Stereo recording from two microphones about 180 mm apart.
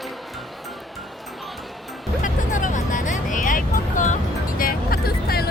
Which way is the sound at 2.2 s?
45° left (ahead or behind).